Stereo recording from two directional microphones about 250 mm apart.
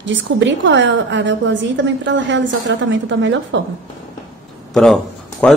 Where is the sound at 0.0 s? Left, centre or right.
Right.